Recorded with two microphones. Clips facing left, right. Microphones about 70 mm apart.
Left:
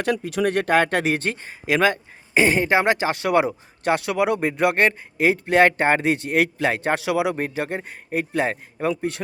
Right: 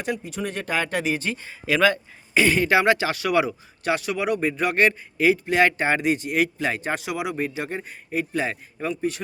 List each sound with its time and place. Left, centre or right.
0.0 s speech: left
1.6 s speech: left
4.1 s speech: left
4.7 s speech: left
7.3 s speech: left